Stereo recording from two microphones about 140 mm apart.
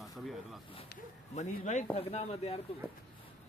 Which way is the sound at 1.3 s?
55° left (ahead or behind).